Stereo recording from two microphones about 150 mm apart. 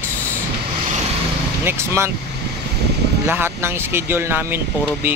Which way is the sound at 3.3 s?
15° right (ahead or behind).